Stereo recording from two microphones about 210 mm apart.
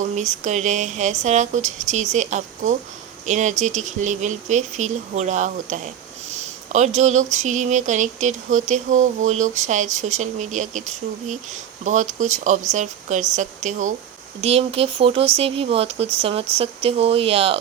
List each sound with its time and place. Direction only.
0.0 s speech: 35° right (ahead or behind)